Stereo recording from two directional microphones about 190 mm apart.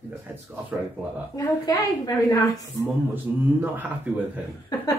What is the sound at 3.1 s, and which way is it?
A man's voice, 10° right (ahead or behind).